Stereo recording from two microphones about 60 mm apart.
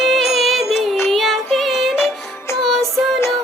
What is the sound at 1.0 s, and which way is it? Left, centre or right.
Music, centre.